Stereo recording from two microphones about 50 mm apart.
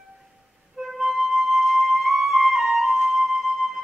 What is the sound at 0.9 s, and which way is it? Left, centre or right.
Flute, centre.